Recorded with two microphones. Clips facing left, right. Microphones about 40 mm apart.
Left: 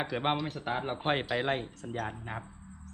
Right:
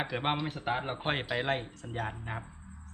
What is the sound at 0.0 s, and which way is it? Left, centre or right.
Speech, centre.